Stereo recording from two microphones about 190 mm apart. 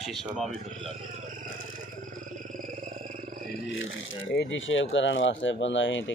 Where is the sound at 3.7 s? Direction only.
90° left.